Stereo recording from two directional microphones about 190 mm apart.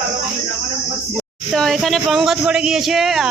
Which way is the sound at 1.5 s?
Centre (ahead or behind).